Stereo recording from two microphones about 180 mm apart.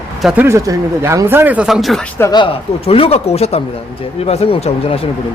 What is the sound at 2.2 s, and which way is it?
Speech, 20° left (ahead or behind).